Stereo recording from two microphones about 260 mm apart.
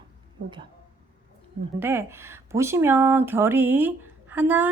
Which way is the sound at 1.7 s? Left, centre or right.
Centre.